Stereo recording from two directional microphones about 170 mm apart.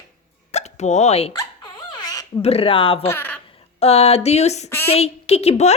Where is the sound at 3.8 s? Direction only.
35° left (ahead or behind).